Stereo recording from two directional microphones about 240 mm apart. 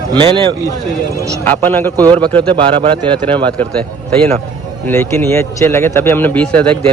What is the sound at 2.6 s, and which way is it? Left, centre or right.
Speech, right.